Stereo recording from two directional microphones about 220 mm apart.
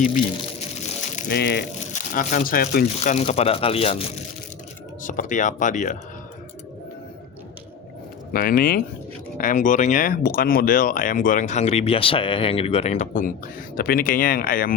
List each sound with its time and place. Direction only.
1.1 s speech: 45° left (ahead or behind)
1.9 s speech: 35° left (ahead or behind)
8.3 s speech: 40° left (ahead or behind)